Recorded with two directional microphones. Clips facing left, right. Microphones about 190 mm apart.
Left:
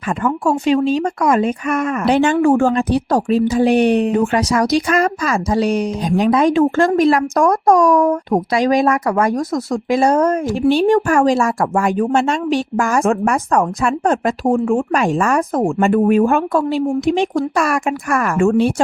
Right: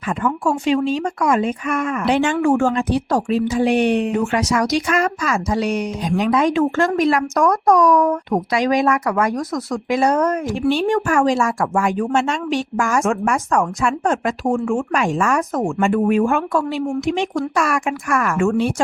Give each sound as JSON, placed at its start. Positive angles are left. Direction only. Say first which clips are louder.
{"t": 0.2, "sound": "speech", "louder": "left 3 dB", "side_deg": 40}